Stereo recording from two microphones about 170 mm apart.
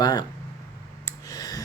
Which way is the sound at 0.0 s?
25° left (ahead or behind).